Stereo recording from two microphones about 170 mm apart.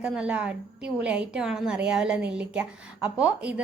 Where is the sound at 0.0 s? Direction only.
5° right (ahead or behind).